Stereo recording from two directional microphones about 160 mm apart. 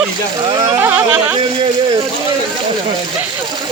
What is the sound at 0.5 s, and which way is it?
Speech, 25° right (ahead or behind).